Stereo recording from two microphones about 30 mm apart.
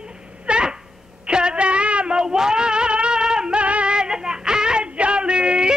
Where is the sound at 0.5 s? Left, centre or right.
Right.